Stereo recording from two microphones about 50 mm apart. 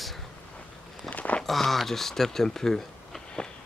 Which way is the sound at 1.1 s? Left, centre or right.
Left.